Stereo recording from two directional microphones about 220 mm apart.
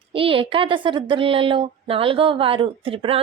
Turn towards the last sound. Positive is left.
turn(degrees=-25)  # may be behind; listen again after turning